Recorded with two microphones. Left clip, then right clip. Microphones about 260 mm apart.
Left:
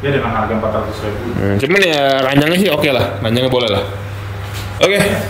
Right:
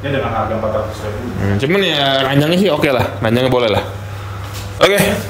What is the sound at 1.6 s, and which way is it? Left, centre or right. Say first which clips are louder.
Speech: left 2 dB; centre.